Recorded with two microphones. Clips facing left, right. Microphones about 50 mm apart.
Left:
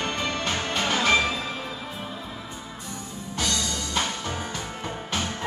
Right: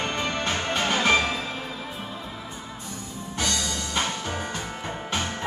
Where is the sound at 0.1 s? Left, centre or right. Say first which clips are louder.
Right 1 dB; right.